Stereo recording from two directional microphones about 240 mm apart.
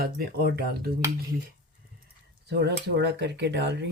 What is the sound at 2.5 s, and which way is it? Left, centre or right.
Speech, right.